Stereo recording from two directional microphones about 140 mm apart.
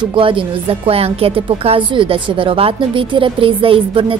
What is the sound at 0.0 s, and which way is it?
A woman's voice, 35° right (ahead or behind).